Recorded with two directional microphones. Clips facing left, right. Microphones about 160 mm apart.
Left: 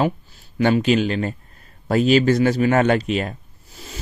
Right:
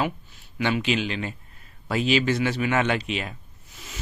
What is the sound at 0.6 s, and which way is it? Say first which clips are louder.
Speech: left 7 dB; 45° left (ahead or behind).